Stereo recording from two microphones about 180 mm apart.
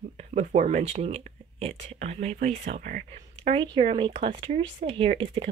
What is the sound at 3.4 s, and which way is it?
Speech, 30° right (ahead or behind).